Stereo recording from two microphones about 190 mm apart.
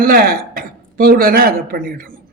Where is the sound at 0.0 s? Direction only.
50° right (ahead or behind).